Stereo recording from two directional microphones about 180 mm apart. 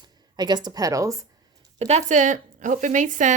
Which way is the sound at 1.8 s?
40° right (ahead or behind).